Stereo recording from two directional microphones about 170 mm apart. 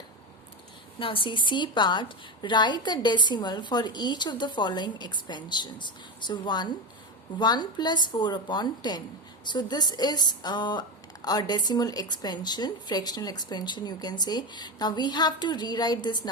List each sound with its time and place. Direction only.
0.9 s a woman's voice: 30° left (ahead or behind)